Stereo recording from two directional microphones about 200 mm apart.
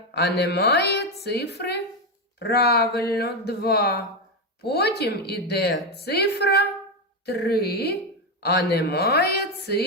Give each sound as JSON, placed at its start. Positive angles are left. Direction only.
{"t": 0.3, "sound": "a woman's voice", "side_deg": 55}